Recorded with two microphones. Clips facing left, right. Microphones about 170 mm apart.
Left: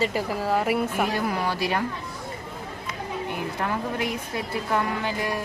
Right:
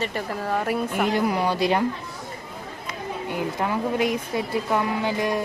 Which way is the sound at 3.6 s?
15° right (ahead or behind).